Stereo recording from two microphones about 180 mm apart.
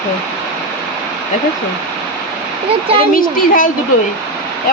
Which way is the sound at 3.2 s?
50° left (ahead or behind).